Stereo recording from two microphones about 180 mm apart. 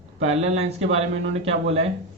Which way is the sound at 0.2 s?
35° right (ahead or behind).